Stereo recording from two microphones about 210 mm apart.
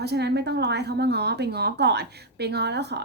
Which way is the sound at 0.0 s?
50° right (ahead or behind).